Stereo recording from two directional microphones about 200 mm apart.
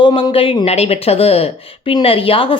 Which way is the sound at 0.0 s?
25° left (ahead or behind).